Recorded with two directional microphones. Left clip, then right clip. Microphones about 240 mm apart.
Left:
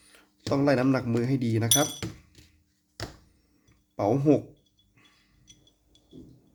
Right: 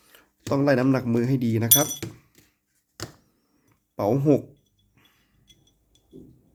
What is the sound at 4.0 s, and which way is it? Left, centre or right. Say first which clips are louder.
Speech: right 2 dB; centre.